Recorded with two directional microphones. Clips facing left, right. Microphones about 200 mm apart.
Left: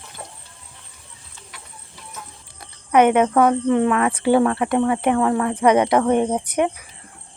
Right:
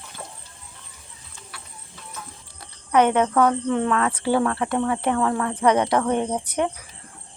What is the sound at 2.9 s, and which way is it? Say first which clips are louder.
Speech: left 3 dB; 15° left (ahead or behind).